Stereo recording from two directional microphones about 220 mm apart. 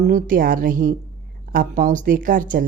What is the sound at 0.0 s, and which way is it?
A woman's voice, 35° right (ahead or behind).